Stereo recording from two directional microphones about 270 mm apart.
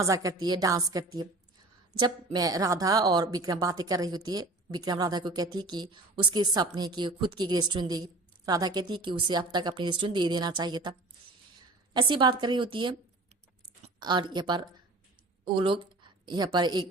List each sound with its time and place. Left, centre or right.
0.0 s a woman's voice: centre
11.9 s a woman's voice: centre